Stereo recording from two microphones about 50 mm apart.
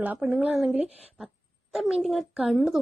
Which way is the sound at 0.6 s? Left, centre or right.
Centre.